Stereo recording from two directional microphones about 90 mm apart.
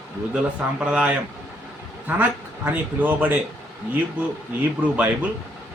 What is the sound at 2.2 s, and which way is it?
Speech, 20° right (ahead or behind).